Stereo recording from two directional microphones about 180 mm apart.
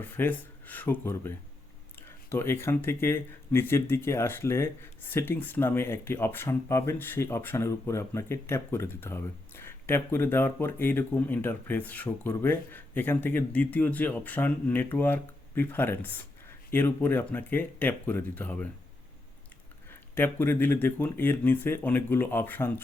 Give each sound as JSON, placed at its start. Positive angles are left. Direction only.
{"t": 0.0, "sound": "speech", "side_deg": 10}
{"t": 19.9, "sound": "speech", "side_deg": 10}